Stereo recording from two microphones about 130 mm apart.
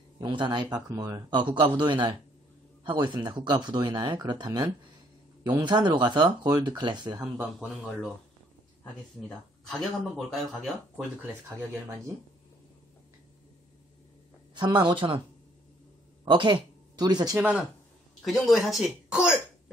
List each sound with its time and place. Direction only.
0.2 s speech: 35° right (ahead or behind)
7.5 s speech: centre (ahead or behind)
9.7 s speech: centre (ahead or behind)
14.5 s speech: 35° right (ahead or behind)
16.3 s speech: 35° right (ahead or behind)
17.4 s speech: 10° right (ahead or behind)
18.2 s speech: centre (ahead or behind)